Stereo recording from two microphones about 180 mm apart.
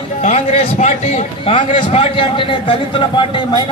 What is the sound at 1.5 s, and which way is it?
A man's voice, 25° left (ahead or behind).